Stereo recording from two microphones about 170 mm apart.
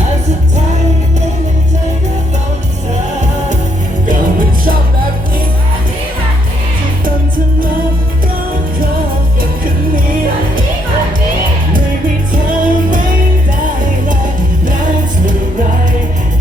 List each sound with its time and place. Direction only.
4.1 s music: 55° right (ahead or behind)
7.0 s music: 55° right (ahead or behind)
9.9 s music: 55° right (ahead or behind)
12.5 s music: 50° right (ahead or behind)